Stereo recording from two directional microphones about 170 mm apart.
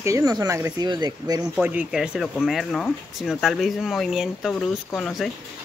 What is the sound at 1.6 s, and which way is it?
Speech, 10° right (ahead or behind).